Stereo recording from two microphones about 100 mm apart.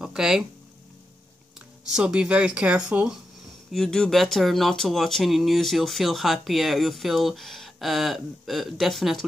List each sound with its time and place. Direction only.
0.0 s speech: 5° right (ahead or behind)
1.9 s speech: 10° right (ahead or behind)
3.7 s speech: 5° left (ahead or behind)